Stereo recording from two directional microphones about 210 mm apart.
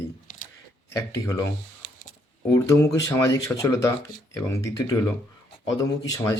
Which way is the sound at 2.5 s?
15° left (ahead or behind).